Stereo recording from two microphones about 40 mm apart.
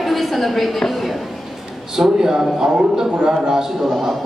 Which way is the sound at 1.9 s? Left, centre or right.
Centre.